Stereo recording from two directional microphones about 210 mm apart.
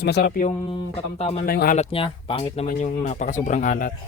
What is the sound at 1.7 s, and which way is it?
Speech, 30° left (ahead or behind).